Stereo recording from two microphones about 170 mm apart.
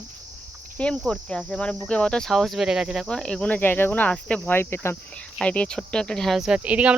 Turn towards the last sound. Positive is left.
turn(degrees=-10)  # may be behind; listen again after turning